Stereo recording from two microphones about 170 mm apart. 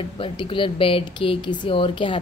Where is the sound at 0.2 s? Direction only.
30° left (ahead or behind).